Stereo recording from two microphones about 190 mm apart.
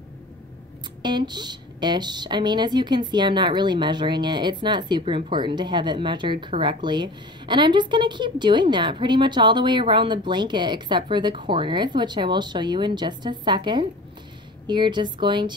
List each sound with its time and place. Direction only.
1.0 s speech: 25° right (ahead or behind)